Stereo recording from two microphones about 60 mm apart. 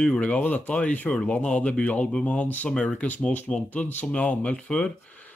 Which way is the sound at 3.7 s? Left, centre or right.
Left.